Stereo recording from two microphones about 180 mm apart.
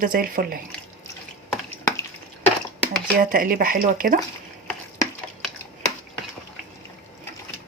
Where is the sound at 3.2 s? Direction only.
50° right (ahead or behind).